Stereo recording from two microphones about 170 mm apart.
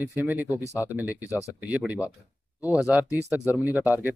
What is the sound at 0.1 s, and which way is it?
Speech, 10° right (ahead or behind).